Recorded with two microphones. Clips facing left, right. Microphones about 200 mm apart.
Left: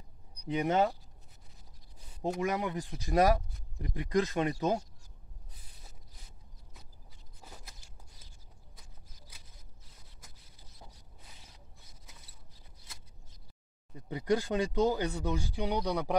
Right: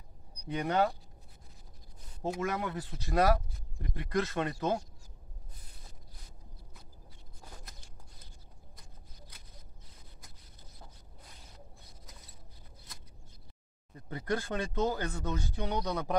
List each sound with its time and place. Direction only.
0.5 s speech: 20° left (ahead or behind)
2.4 s speech: 15° left (ahead or behind)
7.4 s a sound: 5° left (ahead or behind)
13.9 s speech: 15° left (ahead or behind)